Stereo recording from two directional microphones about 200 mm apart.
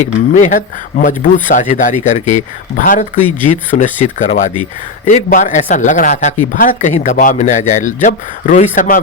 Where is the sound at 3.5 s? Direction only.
40° left (ahead or behind).